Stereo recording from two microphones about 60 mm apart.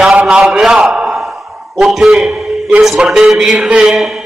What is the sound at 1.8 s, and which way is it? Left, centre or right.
Speech, centre.